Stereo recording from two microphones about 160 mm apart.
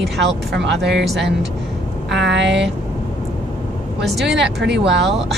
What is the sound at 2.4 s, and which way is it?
Speech, 90° right.